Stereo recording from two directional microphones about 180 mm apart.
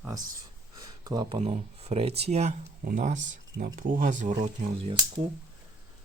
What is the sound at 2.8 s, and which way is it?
Speech, 50° right (ahead or behind).